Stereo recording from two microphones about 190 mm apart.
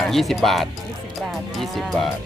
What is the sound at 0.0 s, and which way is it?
Speech, centre (ahead or behind).